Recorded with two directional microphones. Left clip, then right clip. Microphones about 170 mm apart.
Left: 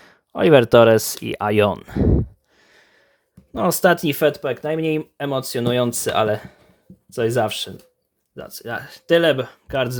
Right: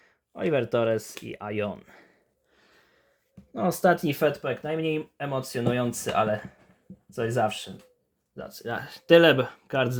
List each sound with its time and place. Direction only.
0.0 s a sound: 45° left (ahead or behind)
0.7 s speech: 40° left (ahead or behind)
3.5 s speech: 45° left (ahead or behind); by 7.7 s 60° left (ahead or behind)
8.4 s speech: 40° left (ahead or behind)
8.6 s speech: 20° left (ahead or behind)